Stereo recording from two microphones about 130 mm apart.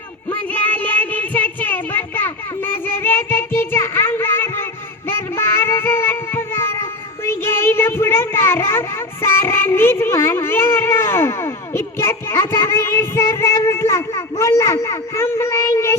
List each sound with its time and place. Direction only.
0.3 s child singing: 15° left (ahead or behind)
7.3 s speech: 20° left (ahead or behind)